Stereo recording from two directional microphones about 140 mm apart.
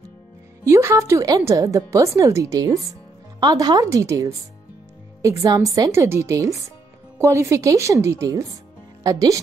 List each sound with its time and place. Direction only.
0.7 s a woman's voice: 20° right (ahead or behind)